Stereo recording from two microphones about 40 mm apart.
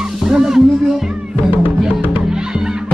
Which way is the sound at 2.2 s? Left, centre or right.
Centre.